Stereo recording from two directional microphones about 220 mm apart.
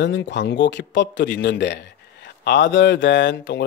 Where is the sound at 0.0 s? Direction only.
55° left (ahead or behind).